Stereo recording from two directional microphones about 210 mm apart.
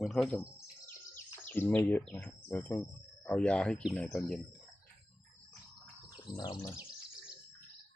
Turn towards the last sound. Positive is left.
turn(degrees=20)  # may be behind; listen again after turning